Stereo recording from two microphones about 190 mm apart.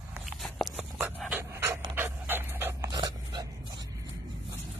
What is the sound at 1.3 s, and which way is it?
Dog, 15° right (ahead or behind).